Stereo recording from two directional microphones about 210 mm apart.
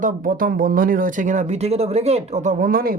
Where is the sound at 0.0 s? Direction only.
40° right (ahead or behind).